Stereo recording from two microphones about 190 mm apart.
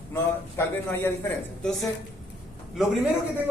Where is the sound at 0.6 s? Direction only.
15° left (ahead or behind).